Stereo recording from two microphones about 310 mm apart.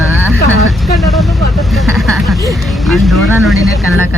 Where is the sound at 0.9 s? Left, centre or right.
Centre.